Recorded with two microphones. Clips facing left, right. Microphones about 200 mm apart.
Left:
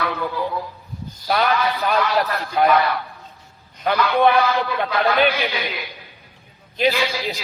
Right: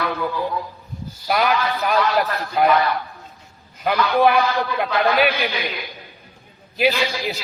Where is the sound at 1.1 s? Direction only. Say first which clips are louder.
Even; 5° right (ahead or behind).